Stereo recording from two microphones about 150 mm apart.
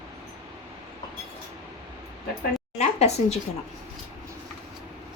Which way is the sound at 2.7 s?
45° left (ahead or behind).